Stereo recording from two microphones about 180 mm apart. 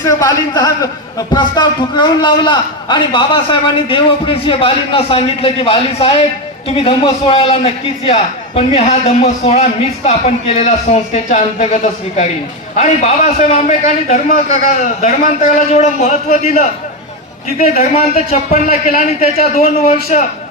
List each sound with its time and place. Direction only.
0.0 s a man's voice: 20° left (ahead or behind); by 16.6 s 40° left (ahead or behind)
17.9 s a man's voice: 40° left (ahead or behind)